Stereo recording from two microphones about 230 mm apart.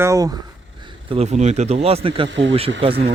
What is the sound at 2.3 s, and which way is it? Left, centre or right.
Speech, right.